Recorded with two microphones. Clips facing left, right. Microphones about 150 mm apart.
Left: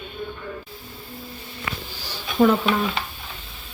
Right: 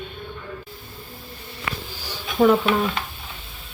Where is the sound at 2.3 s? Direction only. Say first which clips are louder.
Right 1 dB; centre (ahead or behind).